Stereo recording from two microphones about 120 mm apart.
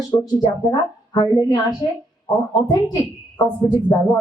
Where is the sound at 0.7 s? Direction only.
35° left (ahead or behind).